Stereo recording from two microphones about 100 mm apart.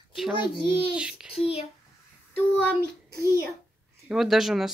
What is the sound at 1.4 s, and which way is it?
Speech, 85° left.